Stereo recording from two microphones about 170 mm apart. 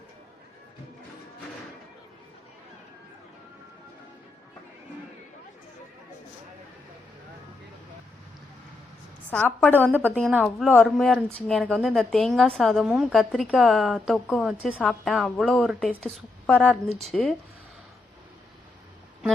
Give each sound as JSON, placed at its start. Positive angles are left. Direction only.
{"t": 9.3, "sound": "a woman's voice", "side_deg": 10}
{"t": 10.2, "sound": "speech", "side_deg": 0}